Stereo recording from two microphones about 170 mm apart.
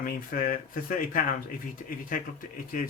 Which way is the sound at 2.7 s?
55° left (ahead or behind).